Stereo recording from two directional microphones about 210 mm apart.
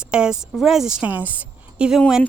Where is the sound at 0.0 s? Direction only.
5° right (ahead or behind).